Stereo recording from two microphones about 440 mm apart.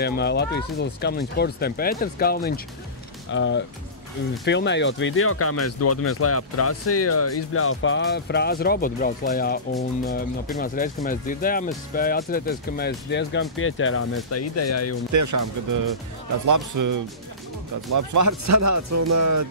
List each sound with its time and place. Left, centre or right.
0.0 s speech: left
15.1 s speech: right